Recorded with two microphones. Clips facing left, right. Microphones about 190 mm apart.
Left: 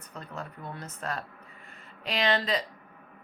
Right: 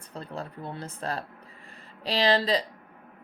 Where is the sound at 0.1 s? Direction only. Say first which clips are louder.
Right 4 dB; 30° right (ahead or behind).